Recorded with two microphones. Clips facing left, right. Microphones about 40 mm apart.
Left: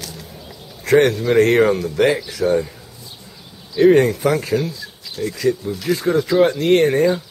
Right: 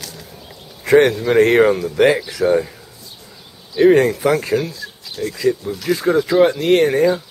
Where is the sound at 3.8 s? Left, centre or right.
Centre.